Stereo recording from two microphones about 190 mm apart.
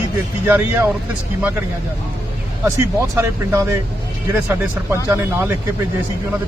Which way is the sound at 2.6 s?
15° right (ahead or behind).